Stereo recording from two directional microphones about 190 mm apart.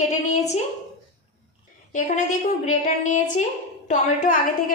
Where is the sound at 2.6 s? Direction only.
40° left (ahead or behind).